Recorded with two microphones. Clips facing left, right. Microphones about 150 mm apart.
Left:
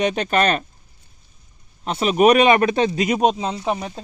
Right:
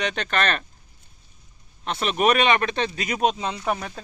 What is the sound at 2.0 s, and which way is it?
Speech, 5° left (ahead or behind).